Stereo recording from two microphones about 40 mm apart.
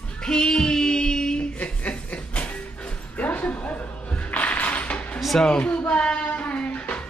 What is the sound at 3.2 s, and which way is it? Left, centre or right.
Music, left.